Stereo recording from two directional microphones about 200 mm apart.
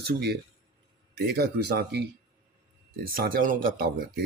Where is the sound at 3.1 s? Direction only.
45° right (ahead or behind).